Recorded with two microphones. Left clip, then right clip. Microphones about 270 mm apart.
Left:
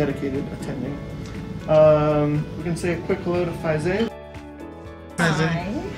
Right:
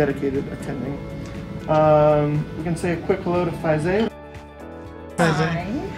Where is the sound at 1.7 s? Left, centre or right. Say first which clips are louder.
Left 1 dB; centre.